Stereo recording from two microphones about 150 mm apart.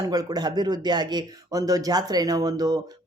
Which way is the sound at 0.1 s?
25° right (ahead or behind).